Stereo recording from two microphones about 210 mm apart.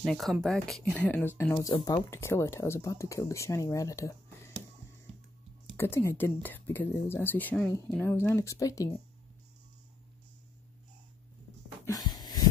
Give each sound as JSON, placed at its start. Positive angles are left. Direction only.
{"t": 0.0, "sound": "speech", "side_deg": 0}
{"t": 5.8, "sound": "speech", "side_deg": 10}
{"t": 11.8, "sound": "a sound", "side_deg": 15}